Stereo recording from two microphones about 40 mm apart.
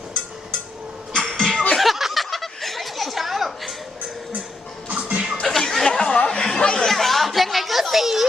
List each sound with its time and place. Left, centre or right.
1.1 s music: centre
1.7 s a sound: centre
4.9 s music: right
5.4 s a sound: centre
6.2 s chatter: centre
6.8 s chatter: centre